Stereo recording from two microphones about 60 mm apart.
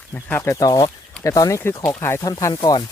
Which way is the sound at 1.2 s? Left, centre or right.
Left.